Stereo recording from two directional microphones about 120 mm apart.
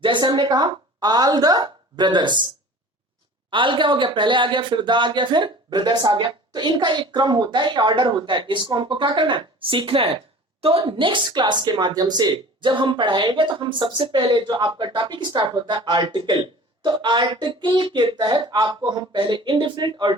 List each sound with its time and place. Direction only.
0.0 s speech: 40° right (ahead or behind)
3.5 s a woman's voice: 45° right (ahead or behind)